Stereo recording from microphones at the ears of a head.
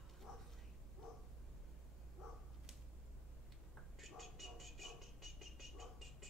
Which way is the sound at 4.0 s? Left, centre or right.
Centre.